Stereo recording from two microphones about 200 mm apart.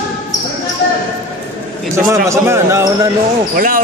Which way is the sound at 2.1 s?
15° right (ahead or behind).